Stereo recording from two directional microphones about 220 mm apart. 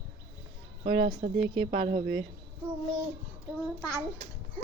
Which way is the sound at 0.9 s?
25° right (ahead or behind).